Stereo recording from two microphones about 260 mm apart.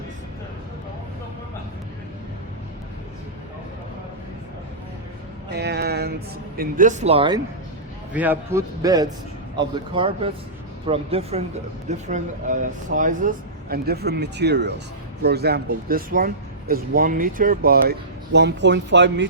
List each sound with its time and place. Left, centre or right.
5.5 s speech: right; by 7.4 s centre
8.1 s a man's voice: centre; by 19.3 s right